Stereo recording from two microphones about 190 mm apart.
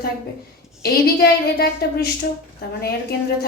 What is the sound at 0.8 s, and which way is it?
A woman's voice, 55° left (ahead or behind).